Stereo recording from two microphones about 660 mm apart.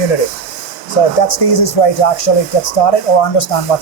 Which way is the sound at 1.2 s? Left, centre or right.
Left.